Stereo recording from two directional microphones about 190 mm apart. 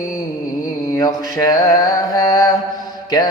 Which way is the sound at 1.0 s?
20° left (ahead or behind).